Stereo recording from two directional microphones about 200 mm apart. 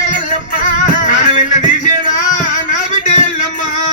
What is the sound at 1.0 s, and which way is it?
Music, 40° left (ahead or behind).